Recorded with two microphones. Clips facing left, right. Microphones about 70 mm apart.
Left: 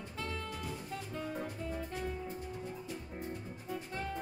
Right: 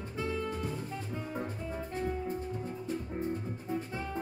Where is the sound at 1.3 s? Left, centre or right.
Right.